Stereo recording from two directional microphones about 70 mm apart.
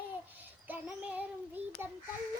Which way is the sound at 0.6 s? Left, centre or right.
Right.